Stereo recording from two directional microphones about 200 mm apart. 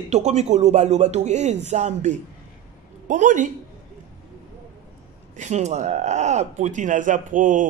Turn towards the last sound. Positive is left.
turn(degrees=-40)  # may be behind; listen again after turning